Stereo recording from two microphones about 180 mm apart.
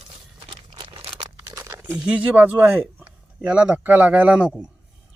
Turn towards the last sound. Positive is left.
turn(degrees=-5)  # may be behind; listen again after turning